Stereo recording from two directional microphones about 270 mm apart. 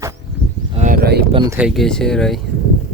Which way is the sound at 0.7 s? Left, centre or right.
Right.